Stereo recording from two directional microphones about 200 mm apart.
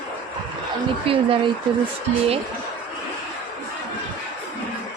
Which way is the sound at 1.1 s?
25° right (ahead or behind).